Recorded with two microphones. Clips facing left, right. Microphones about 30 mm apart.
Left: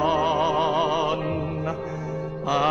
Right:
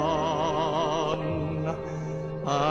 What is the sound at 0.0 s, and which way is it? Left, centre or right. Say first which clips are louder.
Music: left 4 dB; left.